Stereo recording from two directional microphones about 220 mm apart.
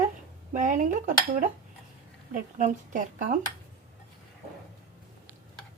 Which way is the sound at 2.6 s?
35° right (ahead or behind).